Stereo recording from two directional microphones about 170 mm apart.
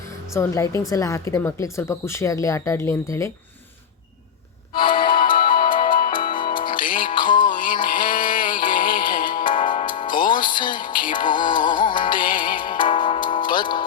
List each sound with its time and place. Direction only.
0.3 s speech: 20° left (ahead or behind)
4.7 s music: 30° left (ahead or behind)
5.5 s music: 55° left (ahead or behind)
9.8 s music: 30° left (ahead or behind)